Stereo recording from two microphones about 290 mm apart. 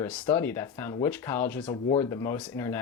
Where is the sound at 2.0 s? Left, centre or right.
Centre.